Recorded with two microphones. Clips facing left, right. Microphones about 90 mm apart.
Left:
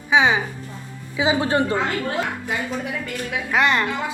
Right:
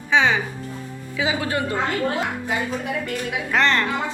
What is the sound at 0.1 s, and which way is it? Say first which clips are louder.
Music: left 1 dB; 15° left (ahead or behind).